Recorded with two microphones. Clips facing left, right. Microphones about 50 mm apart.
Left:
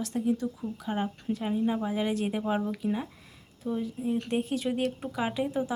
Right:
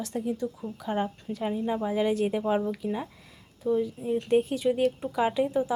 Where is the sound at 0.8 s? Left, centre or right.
Centre.